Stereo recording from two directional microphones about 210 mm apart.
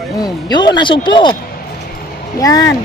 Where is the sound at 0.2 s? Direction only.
20° left (ahead or behind).